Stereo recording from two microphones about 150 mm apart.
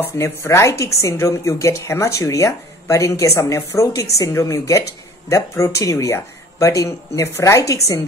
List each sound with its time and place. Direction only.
0.0 s speech: 15° left (ahead or behind)